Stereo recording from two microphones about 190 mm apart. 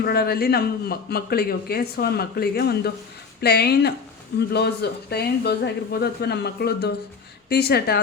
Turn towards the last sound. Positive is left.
turn(degrees=55)  # may be behind; listen again after turning